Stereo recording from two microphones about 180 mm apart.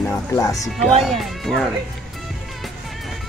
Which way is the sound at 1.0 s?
Centre (ahead or behind).